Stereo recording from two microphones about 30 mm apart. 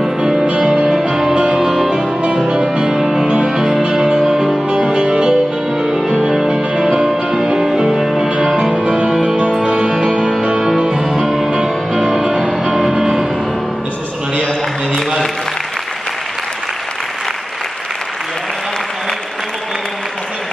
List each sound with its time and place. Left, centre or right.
1.1 s music: right
2.9 s music: centre; by 6.0 s right
6.3 s music: centre
8.8 s music: right
11.0 s music: centre
12.2 s music: right
15.0 s applause: centre